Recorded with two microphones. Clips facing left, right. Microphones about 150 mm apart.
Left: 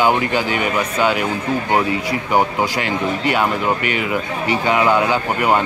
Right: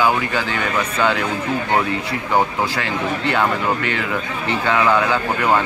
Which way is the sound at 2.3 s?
20° left (ahead or behind).